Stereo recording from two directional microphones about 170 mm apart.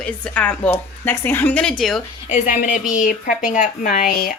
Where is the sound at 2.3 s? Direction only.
50° left (ahead or behind).